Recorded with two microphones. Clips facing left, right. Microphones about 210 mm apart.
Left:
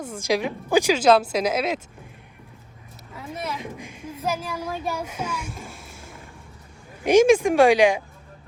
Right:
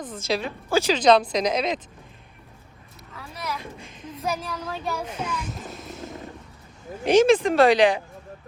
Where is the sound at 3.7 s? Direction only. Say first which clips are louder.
Left 3 dB; 10° left (ahead or behind).